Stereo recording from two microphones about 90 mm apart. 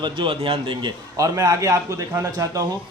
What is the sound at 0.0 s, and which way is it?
Speech, 70° right (ahead or behind).